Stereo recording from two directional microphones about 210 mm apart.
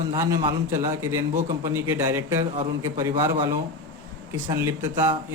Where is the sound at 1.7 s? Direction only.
10° right (ahead or behind).